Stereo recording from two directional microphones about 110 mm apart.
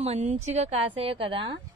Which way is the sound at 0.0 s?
85° right.